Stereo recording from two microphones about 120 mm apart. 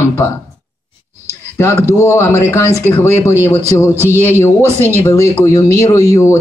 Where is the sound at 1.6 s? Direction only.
25° left (ahead or behind).